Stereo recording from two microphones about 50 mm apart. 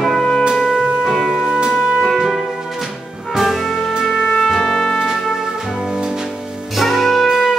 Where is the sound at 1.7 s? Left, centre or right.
Centre.